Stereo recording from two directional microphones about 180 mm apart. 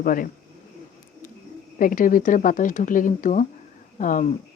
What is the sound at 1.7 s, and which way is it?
Speech, 50° left (ahead or behind).